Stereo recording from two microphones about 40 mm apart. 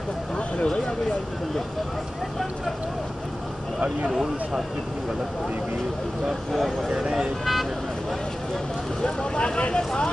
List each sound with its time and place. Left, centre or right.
6.5 s speech: centre
9.0 s speech: left